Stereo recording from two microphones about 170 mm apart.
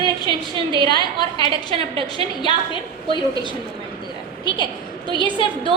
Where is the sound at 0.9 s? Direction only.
25° left (ahead or behind).